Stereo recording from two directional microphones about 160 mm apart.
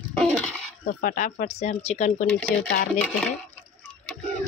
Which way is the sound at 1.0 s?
55° left (ahead or behind).